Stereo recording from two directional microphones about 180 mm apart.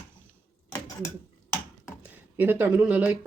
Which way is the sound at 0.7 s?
20° left (ahead or behind).